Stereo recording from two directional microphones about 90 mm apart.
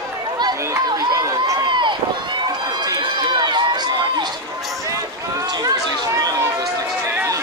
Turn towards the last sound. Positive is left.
turn(degrees=-45)  # may be behind; listen again after turning